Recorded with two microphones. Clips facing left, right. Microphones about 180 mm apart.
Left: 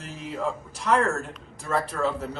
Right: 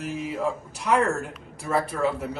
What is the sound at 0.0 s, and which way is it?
A man's voice, 5° right (ahead or behind).